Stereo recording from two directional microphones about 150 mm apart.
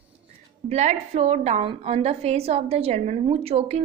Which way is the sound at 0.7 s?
50° right (ahead or behind).